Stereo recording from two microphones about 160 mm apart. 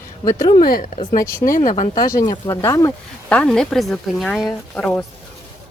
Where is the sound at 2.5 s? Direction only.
20° left (ahead or behind).